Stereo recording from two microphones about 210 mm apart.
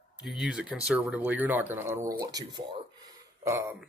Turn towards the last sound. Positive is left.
turn(degrees=-15)  # may be behind; listen again after turning